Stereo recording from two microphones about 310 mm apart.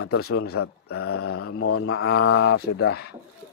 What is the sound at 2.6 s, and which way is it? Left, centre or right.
Speech, left.